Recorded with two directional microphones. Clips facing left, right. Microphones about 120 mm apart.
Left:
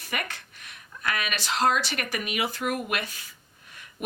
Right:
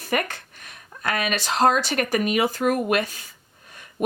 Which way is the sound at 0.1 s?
40° right (ahead or behind).